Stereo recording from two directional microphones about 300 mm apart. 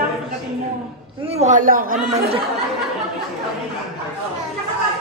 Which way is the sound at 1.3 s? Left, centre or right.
Right.